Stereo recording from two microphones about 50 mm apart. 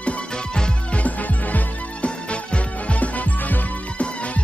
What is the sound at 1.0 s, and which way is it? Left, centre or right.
Music, left.